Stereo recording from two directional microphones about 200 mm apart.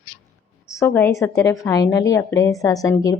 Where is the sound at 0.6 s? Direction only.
15° left (ahead or behind).